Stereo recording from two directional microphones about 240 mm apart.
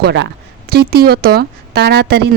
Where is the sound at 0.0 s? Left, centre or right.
Right.